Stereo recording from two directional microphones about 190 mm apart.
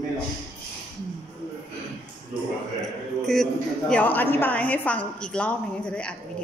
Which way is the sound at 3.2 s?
Centre (ahead or behind).